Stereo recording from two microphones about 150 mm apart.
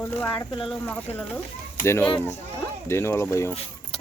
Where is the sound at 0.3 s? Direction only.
35° left (ahead or behind).